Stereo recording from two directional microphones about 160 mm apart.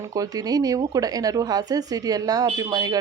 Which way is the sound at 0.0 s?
20° right (ahead or behind).